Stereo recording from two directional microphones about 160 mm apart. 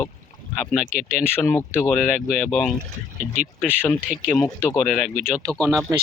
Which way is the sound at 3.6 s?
10° left (ahead or behind).